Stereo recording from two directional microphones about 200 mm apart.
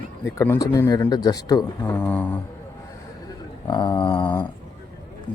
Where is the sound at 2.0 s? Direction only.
5° left (ahead or behind).